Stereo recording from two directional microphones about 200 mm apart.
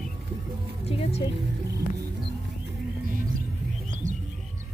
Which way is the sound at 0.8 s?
30° left (ahead or behind).